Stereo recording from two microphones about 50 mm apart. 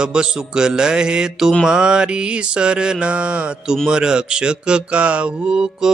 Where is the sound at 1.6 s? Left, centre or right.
Centre.